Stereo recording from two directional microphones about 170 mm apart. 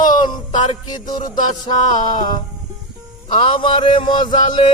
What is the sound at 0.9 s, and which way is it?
Speech, 25° left (ahead or behind).